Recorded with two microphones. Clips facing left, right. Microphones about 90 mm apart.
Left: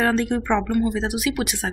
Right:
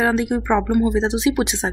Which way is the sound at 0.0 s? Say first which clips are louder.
Right 2 dB; 10° right (ahead or behind).